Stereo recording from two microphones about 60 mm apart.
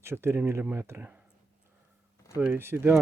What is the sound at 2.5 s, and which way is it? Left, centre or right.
Speech, right.